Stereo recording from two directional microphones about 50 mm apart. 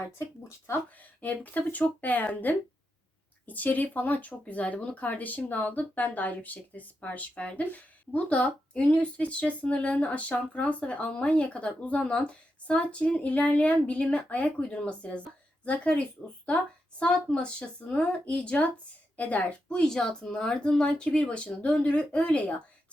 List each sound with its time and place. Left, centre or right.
0.2 s speech: left
1.2 s a woman's voice: left
19.8 s speech: centre